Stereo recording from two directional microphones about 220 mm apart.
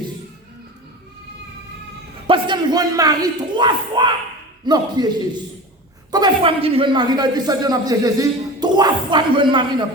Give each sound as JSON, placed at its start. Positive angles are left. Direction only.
{"t": 2.2, "sound": "a man's voice", "side_deg": -20}